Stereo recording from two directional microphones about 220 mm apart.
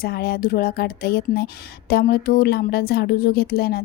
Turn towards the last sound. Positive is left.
turn(degrees=45)  # may be behind; listen again after turning